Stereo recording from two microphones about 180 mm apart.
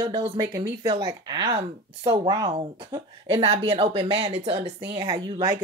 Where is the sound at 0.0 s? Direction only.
25° right (ahead or behind).